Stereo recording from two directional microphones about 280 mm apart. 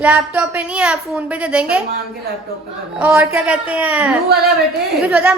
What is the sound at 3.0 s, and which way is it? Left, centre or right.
A woman's voice, centre.